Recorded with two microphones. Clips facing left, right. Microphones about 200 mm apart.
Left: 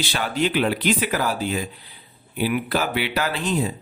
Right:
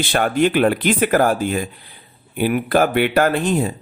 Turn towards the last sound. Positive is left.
turn(degrees=-50)  # may be behind; listen again after turning